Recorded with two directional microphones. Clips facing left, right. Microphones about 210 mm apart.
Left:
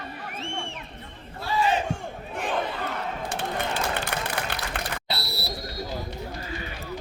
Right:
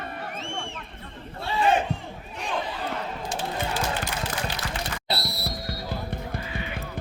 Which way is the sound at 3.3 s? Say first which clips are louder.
Right 1 dB; 60° left (ahead or behind).